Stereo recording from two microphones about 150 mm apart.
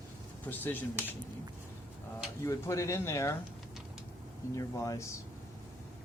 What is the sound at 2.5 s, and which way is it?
Speech, 20° left (ahead or behind).